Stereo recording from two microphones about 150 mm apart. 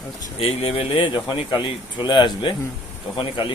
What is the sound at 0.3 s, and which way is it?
Speech, 40° left (ahead or behind).